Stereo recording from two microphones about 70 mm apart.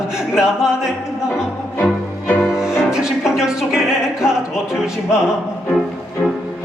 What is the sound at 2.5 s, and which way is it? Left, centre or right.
Music, centre.